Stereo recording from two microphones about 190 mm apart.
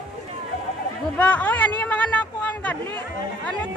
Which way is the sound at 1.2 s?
10° left (ahead or behind).